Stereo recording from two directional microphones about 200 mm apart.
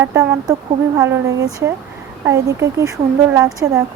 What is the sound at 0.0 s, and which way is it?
Speech, 15° right (ahead or behind).